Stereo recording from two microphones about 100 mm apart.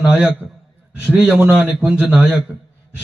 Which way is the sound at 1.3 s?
25° right (ahead or behind).